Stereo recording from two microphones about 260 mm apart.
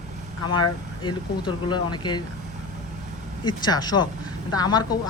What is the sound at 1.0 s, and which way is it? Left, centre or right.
Speech, centre.